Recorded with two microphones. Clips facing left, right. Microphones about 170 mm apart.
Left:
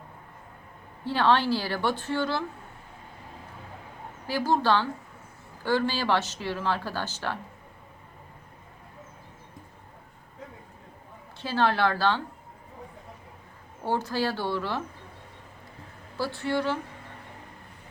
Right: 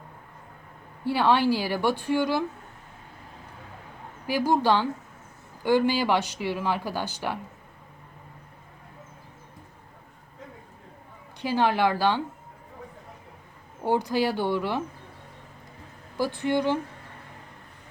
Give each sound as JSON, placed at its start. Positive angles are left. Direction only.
{"t": 1.0, "sound": "speech", "side_deg": -10}
{"t": 4.3, "sound": "speech", "side_deg": -15}
{"t": 11.3, "sound": "speech", "side_deg": -15}
{"t": 13.8, "sound": "speech", "side_deg": -15}
{"t": 16.1, "sound": "speech", "side_deg": -15}